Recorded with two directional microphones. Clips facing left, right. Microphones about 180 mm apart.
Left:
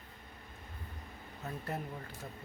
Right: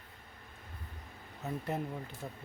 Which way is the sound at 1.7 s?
20° right (ahead or behind).